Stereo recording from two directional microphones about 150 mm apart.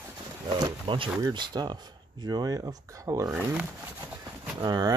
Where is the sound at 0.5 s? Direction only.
30° right (ahead or behind).